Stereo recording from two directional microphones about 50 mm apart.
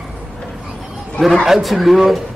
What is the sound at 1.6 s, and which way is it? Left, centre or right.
Speech, centre.